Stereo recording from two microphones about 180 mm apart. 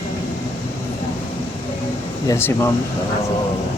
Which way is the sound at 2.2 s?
15° left (ahead or behind).